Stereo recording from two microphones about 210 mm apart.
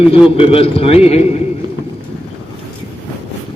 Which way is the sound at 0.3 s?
25° left (ahead or behind).